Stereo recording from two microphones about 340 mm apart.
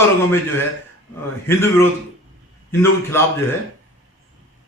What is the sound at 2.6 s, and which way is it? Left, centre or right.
Speech, centre.